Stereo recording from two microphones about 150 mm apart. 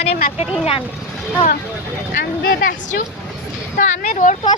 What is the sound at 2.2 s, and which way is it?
Vehicle, 90° left.